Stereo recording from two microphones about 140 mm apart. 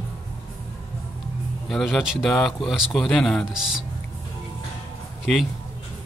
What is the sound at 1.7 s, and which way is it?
Speech, centre (ahead or behind).